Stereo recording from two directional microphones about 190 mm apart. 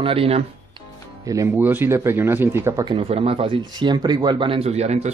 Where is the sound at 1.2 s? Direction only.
15° right (ahead or behind); by 5.1 s 35° right (ahead or behind).